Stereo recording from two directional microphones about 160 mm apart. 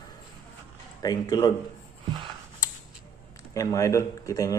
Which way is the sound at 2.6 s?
20° left (ahead or behind).